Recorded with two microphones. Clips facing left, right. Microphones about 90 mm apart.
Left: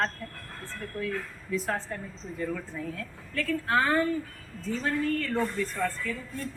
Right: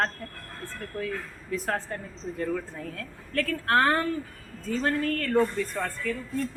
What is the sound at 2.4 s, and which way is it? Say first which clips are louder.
A woman's voice: right 2 dB; 60° right (ahead or behind).